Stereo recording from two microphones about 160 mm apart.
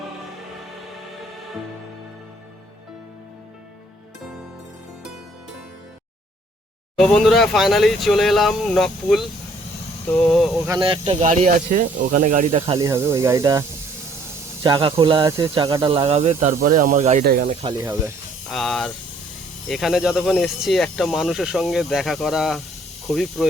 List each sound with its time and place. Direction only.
6.9 s speech: 5° left (ahead or behind)
10.8 s speech: 30° right (ahead or behind); by 12.5 s 55° right (ahead or behind)
12.5 s speech: 40° right (ahead or behind)
12.8 s speech: 15° right (ahead or behind)
14.6 s speech: 30° right (ahead or behind)
15.2 s speech: 15° right (ahead or behind)
15.5 s speech: 30° right (ahead or behind)
16.4 s speech: 55° right (ahead or behind)
17.2 s speech: 70° right (ahead or behind)
17.5 s speech: 35° right (ahead or behind)
17.7 s speech: 15° right (ahead or behind)
18.4 s speech: centre (ahead or behind)